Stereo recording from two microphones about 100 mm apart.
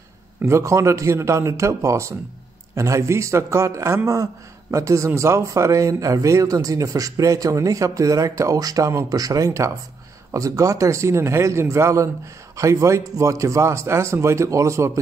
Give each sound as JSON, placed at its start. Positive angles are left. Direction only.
{"t": 0.4, "sound": "a man's voice", "side_deg": -30}